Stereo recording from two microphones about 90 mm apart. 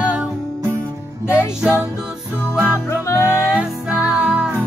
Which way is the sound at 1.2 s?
10° right (ahead or behind).